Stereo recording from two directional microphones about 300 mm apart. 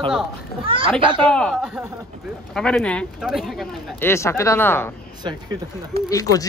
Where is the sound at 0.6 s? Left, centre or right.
Centre.